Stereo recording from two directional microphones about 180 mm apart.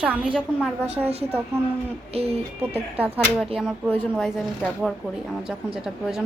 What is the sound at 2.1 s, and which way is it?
Speech, 35° right (ahead or behind).